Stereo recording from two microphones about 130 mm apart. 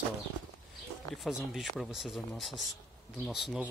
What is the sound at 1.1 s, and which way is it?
Speech, centre (ahead or behind).